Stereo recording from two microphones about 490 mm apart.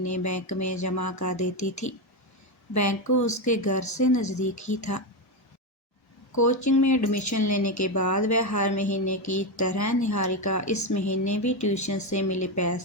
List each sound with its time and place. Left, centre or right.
0.0 s speech: left
6.3 s speech: left